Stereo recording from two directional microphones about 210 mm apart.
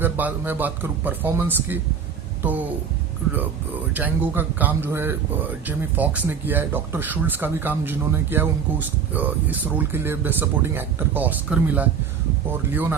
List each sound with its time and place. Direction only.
0.0 s speech: 10° right (ahead or behind)
3.9 s speech: 10° right (ahead or behind)